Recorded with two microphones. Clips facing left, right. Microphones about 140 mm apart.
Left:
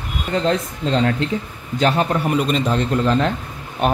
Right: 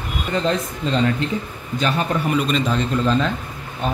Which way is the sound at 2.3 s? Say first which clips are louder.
Left 1 dB; 55° left (ahead or behind).